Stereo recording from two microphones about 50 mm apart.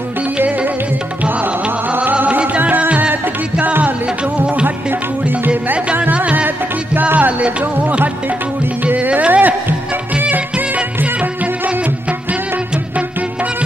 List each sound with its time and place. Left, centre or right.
1.2 s music: right
8.8 s music: right